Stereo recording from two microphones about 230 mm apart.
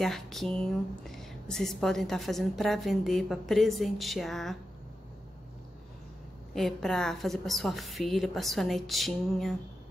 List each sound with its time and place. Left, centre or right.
0.0 s speech: centre
6.5 s speech: centre